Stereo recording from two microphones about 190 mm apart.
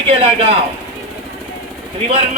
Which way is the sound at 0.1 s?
30° right (ahead or behind).